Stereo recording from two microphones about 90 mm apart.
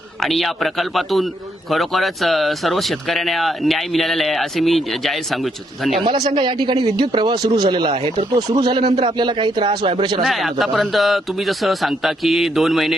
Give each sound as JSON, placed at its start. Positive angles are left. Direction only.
{"t": 0.2, "sound": "speech", "side_deg": 0}
{"t": 6.0, "sound": "speech", "side_deg": -60}
{"t": 7.3, "sound": "speech", "side_deg": -50}
{"t": 10.2, "sound": "speech", "side_deg": 0}